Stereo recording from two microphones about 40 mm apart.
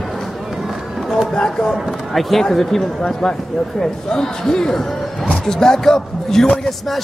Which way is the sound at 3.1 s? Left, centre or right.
Centre.